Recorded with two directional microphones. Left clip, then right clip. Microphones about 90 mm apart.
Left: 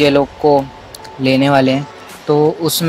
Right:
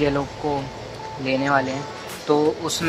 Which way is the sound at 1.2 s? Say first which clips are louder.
Left 9 dB; 35° left (ahead or behind).